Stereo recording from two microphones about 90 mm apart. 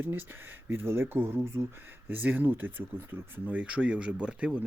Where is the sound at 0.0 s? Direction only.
20° right (ahead or behind).